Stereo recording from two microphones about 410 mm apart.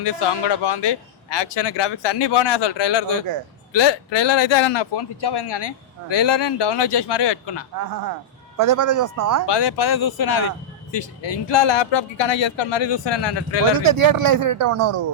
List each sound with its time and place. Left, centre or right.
0.0 s a man's voice: left
8.5 s speech: right
9.5 s speech: left
10.9 s a man's voice: left
13.7 s speech: right
14.6 s speech: right